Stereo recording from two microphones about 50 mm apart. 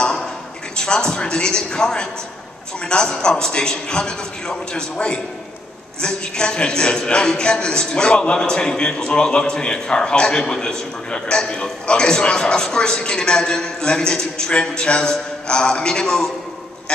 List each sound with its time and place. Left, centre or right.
0.7 s a man's voice: centre